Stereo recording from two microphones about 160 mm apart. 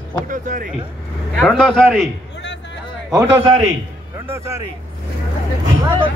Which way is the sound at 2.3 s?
90° left.